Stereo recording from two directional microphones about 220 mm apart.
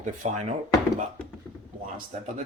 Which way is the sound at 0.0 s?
35° right (ahead or behind).